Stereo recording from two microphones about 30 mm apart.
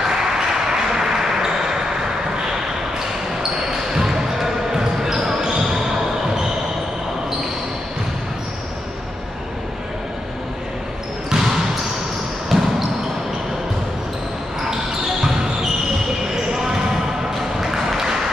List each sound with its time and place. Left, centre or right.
0.4 s ping: centre
3.9 s basketball bounce: centre
11.2 s basketball bounce: centre
16.5 s basketball bounce: centre
17.6 s a sound: centre